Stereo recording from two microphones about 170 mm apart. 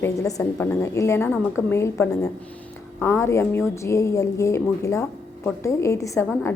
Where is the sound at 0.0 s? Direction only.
20° left (ahead or behind).